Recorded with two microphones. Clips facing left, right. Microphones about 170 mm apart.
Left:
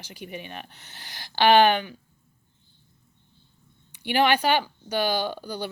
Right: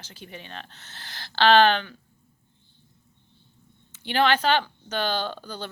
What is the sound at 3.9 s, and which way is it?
Speech, 15° left (ahead or behind).